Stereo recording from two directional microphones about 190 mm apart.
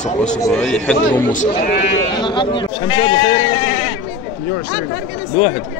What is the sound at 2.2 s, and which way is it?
Speech, 25° left (ahead or behind).